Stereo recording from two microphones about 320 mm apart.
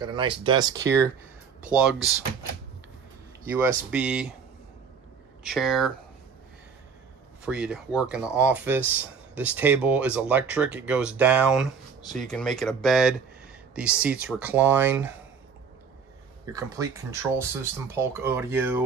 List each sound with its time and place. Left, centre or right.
0.0 s speech: centre
1.8 s speech: centre
3.4 s speech: centre
5.4 s speech: centre
7.4 s speech: centre
16.5 s speech: centre